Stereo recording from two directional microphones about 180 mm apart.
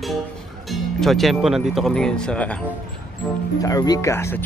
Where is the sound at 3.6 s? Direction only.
20° left (ahead or behind).